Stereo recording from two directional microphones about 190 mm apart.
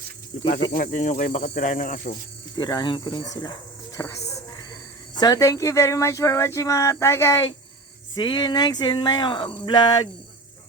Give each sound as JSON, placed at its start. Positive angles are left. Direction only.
{"t": 0.7, "sound": "speech", "side_deg": 40}
{"t": 2.6, "sound": "speech", "side_deg": 25}
{"t": 5.2, "sound": "speech", "side_deg": 20}